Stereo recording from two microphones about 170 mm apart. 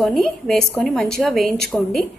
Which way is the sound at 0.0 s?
Centre (ahead or behind).